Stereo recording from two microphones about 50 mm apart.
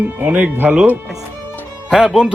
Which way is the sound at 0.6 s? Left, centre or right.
Centre.